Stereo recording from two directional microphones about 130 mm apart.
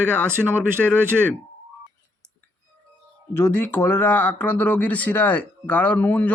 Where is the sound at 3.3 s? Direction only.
20° left (ahead or behind).